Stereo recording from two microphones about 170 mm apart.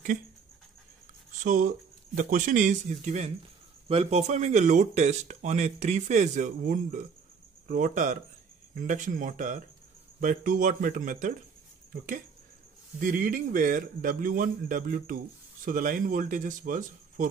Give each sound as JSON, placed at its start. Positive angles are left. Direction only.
{"t": 1.4, "sound": "speech", "side_deg": -50}
{"t": 13.0, "sound": "a man's voice", "side_deg": -55}